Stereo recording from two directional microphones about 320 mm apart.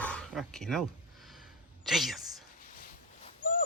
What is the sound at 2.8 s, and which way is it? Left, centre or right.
Dog, left.